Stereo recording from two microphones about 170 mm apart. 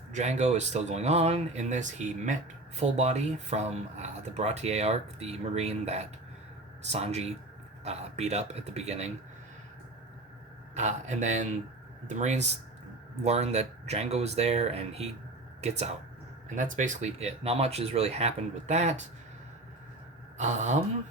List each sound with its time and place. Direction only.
0.1 s speech: 45° right (ahead or behind)
10.8 s speech: 45° right (ahead or behind)
20.4 s speech: 45° right (ahead or behind)